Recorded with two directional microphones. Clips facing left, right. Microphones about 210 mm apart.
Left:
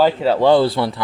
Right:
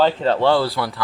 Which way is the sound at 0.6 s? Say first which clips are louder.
Left 5 dB; 25° left (ahead or behind).